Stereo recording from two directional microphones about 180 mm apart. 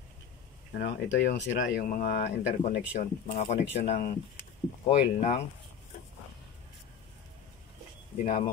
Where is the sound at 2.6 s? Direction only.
45° left (ahead or behind).